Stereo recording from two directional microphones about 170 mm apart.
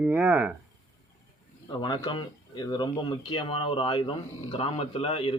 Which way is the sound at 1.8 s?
25° left (ahead or behind).